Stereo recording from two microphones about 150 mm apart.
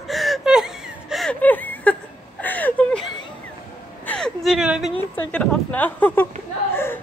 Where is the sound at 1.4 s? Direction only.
10° left (ahead or behind).